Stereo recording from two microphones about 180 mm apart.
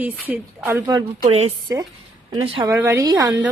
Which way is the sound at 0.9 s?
20° right (ahead or behind).